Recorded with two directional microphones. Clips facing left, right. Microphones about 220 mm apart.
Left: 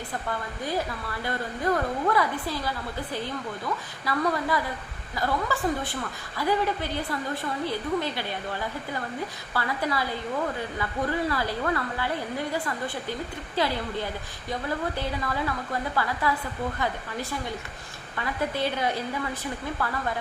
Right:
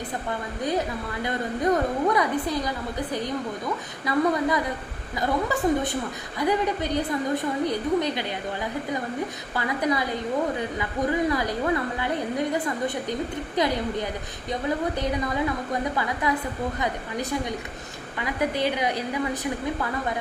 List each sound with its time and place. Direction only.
0.3 s a woman's voice: 20° right (ahead or behind)
9.6 s a woman's voice: 20° right (ahead or behind)